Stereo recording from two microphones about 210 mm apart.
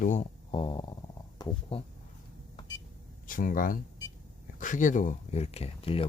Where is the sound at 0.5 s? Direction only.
25° left (ahead or behind).